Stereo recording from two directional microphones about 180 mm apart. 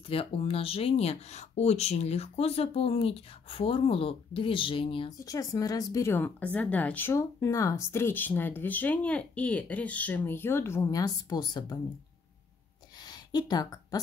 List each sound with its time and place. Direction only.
0.1 s speech: 30° left (ahead or behind)
13.3 s speech: 25° left (ahead or behind)